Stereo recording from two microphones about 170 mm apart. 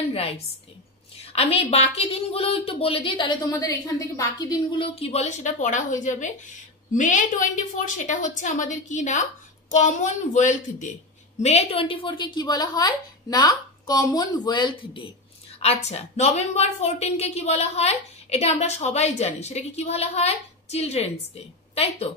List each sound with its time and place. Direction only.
0.1 s a woman's voice: 35° left (ahead or behind)
11.4 s a woman's voice: 35° left (ahead or behind)
15.6 s a woman's voice: 40° left (ahead or behind)